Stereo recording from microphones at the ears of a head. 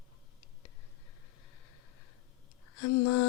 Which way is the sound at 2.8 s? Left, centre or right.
Left.